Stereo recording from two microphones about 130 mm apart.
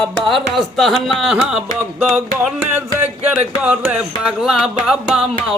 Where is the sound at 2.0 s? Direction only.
10° right (ahead or behind).